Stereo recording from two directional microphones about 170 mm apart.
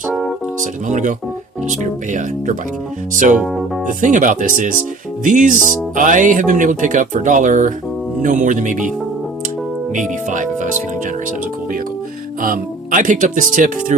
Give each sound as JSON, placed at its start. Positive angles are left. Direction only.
{"t": 0.1, "sound": "music", "side_deg": 0}
{"t": 0.6, "sound": "speech", "side_deg": -45}
{"t": 3.3, "sound": "speech", "side_deg": 0}
{"t": 4.0, "sound": "speech", "side_deg": -50}
{"t": 9.9, "sound": "speech", "side_deg": -50}
{"t": 12.4, "sound": "speech", "side_deg": -50}